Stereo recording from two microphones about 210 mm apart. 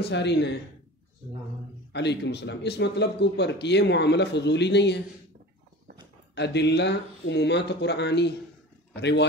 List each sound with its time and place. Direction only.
0.0 s speech: 55° left (ahead or behind)
1.9 s speech: 55° left (ahead or behind)
6.3 s speech: 55° left (ahead or behind)